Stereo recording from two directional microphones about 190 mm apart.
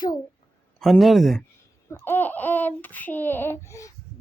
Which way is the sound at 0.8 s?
Centre (ahead or behind).